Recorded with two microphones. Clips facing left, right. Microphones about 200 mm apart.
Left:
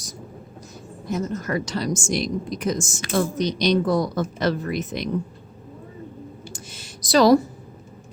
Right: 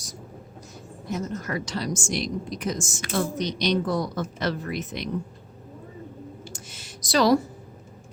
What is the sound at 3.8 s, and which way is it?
Speech, 90° left.